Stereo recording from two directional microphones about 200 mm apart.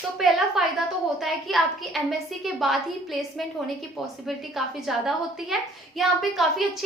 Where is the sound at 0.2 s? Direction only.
Centre (ahead or behind).